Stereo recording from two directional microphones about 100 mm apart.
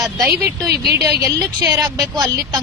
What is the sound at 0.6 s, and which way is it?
Speech, 35° right (ahead or behind).